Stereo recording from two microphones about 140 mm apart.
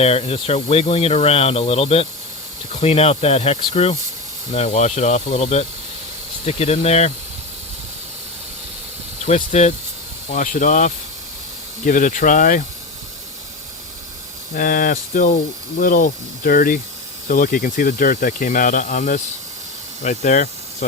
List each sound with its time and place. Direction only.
0.0 s speech: 45° left (ahead or behind)
9.2 s speech: 55° left (ahead or behind)
10.3 s speech: 70° left (ahead or behind)
14.5 s speech: 75° left (ahead or behind); by 20.5 s 60° left (ahead or behind)